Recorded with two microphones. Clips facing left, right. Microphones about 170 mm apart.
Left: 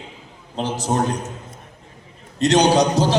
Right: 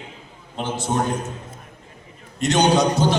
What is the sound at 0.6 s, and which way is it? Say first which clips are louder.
Speech: left 2 dB; 40° left (ahead or behind).